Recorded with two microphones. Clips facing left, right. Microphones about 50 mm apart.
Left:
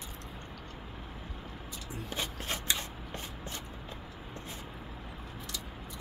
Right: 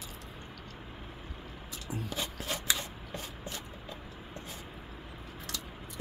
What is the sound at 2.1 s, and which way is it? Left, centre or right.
Rub, left.